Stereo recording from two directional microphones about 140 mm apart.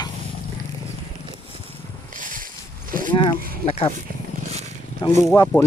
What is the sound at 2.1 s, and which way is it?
Boat, 70° right (ahead or behind).